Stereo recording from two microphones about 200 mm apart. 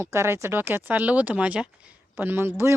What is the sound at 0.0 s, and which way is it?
Speech, 15° right (ahead or behind).